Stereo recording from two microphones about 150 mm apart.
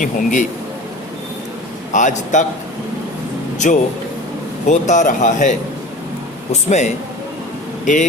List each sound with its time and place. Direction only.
0.0 s speech: 60° left (ahead or behind)
1.9 s speech: 55° left (ahead or behind)
3.6 s speech: 55° left (ahead or behind)